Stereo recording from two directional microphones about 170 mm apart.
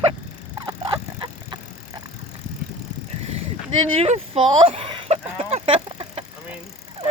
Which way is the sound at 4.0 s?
35° right (ahead or behind).